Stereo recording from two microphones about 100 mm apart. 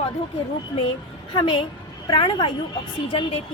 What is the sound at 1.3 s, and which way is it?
A woman's voice, 55° left (ahead or behind).